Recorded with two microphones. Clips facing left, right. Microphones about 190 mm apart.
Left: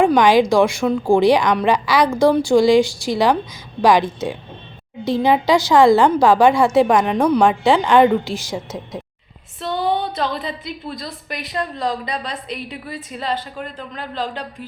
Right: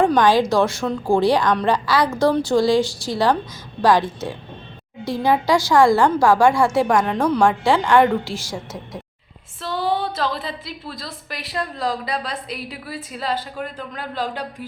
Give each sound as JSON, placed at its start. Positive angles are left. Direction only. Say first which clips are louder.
{"t": 0.0, "sound": "a woman's voice", "louder": "left 3 dB", "side_deg": 15}
{"t": 9.7, "sound": "a woman's voice", "louder": "left 1 dB", "side_deg": 0}